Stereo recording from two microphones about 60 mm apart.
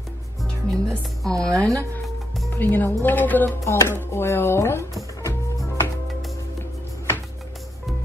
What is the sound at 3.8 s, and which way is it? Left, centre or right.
Speech, left.